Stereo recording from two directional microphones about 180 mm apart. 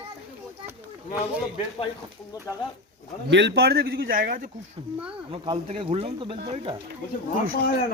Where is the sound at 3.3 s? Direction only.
75° right (ahead or behind); by 4.4 s 50° right (ahead or behind).